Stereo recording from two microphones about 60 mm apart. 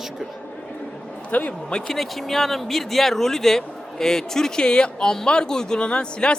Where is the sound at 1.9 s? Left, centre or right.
Centre.